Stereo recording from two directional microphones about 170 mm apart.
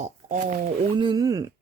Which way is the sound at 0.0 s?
45° right (ahead or behind).